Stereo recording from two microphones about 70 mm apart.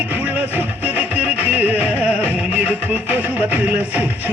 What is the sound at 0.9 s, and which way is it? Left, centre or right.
Music, right.